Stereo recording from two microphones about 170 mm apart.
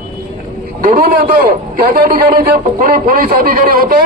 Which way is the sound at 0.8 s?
55° right (ahead or behind).